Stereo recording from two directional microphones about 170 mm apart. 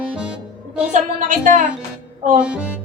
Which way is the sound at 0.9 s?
50° right (ahead or behind).